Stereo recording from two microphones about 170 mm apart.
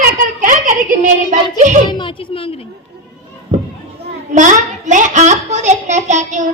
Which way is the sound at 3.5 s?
45° right (ahead or behind).